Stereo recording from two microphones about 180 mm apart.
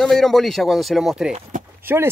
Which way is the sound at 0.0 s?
Centre (ahead or behind).